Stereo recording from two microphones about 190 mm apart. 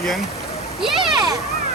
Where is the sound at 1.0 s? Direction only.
25° right (ahead or behind).